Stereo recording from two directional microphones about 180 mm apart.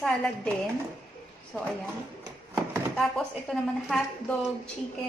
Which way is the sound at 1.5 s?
Centre (ahead or behind).